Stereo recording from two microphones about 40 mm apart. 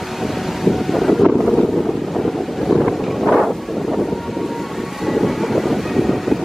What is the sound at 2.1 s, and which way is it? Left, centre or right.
Wind noise, centre.